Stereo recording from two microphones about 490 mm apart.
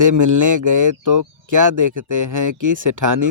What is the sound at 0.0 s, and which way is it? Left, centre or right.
Speech, right.